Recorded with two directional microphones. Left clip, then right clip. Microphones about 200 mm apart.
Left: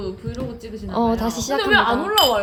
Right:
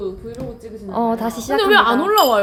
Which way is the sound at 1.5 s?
65° right (ahead or behind).